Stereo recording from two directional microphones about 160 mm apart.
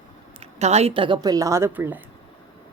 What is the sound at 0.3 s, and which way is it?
Speech, 40° right (ahead or behind).